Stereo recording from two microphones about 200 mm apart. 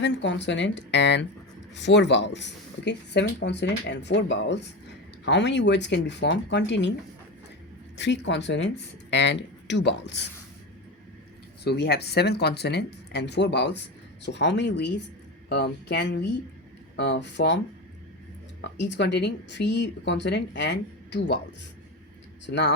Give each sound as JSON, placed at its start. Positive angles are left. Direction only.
{"t": 0.0, "sound": "speech", "side_deg": 65}
{"t": 7.9, "sound": "speech", "side_deg": 60}
{"t": 11.6, "sound": "speech", "side_deg": 55}
{"t": 18.8, "sound": "speech", "side_deg": 60}
{"t": 22.4, "sound": "speech", "side_deg": 60}